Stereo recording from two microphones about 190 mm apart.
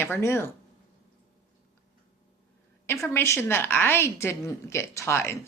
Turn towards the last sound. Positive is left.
turn(degrees=15)  # may be behind; listen again after turning